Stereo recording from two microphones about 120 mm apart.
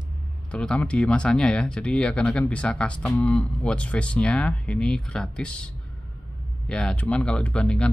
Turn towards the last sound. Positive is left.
turn(degrees=5)  # may be behind; listen again after turning